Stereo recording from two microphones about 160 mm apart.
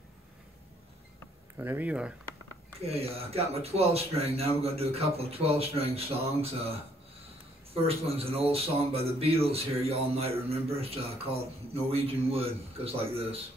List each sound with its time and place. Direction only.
1.6 s speech: 10° right (ahead or behind)
2.9 s speech: 40° right (ahead or behind)